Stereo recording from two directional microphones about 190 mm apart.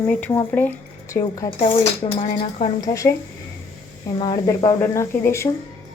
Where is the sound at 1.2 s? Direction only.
20° left (ahead or behind).